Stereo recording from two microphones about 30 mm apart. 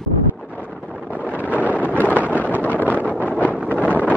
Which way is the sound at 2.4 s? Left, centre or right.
Left.